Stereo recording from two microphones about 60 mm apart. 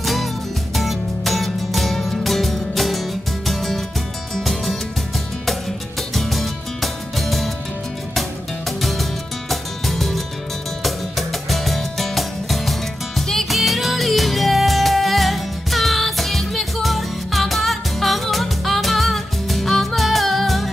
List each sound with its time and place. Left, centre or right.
0.0 s music: centre
6.1 s music: centre